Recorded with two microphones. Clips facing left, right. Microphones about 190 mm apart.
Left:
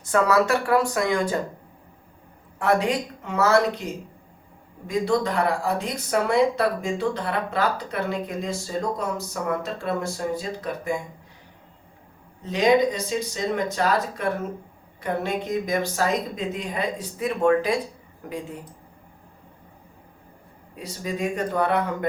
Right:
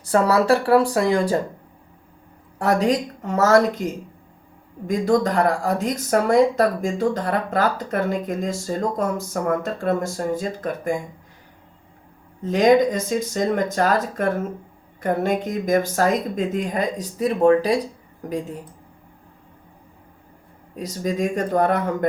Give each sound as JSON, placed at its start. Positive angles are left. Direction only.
{"t": 0.0, "sound": "speech", "side_deg": -35}
{"t": 2.6, "sound": "speech", "side_deg": -40}
{"t": 4.9, "sound": "speech", "side_deg": -45}
{"t": 12.4, "sound": "speech", "side_deg": -45}
{"t": 20.7, "sound": "speech", "side_deg": -40}